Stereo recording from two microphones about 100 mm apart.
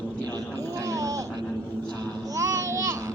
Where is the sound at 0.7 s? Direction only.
35° right (ahead or behind).